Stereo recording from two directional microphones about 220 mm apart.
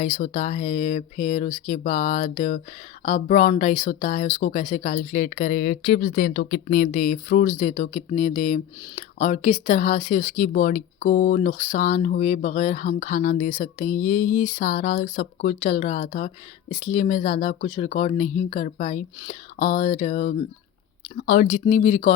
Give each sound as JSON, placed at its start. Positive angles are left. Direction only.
{"t": 0.0, "sound": "speech", "side_deg": 35}